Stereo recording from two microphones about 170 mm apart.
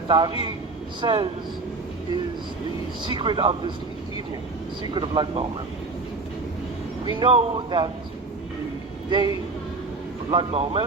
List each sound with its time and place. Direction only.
0.1 s speech: 30° right (ahead or behind)
3.0 s speech: 30° right (ahead or behind)
4.8 s speech: 30° right (ahead or behind)
7.0 s speech: 25° right (ahead or behind)
9.0 s a woman's voice: 25° right (ahead or behind)
10.3 s speech: 35° right (ahead or behind)